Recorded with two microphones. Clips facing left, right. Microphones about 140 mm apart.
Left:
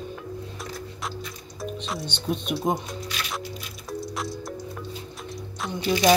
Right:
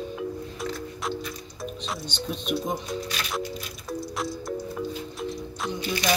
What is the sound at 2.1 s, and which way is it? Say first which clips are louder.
Speech: left 1 dB; 55° left (ahead or behind).